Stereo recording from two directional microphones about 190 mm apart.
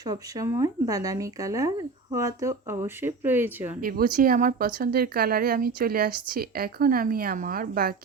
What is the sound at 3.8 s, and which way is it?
Speech, 50° right (ahead or behind).